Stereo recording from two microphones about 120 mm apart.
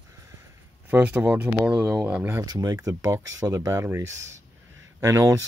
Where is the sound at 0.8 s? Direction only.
15° right (ahead or behind).